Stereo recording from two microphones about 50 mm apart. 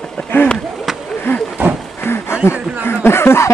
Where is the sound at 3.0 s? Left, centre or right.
Left.